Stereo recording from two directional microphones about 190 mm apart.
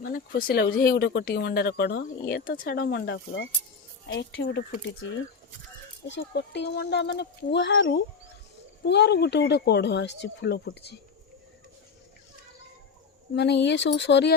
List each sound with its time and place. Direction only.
0.0 s speech: 50° left (ahead or behind); by 4.6 s 70° left (ahead or behind)
6.1 s speech: 70° left (ahead or behind)
13.3 s speech: 65° left (ahead or behind)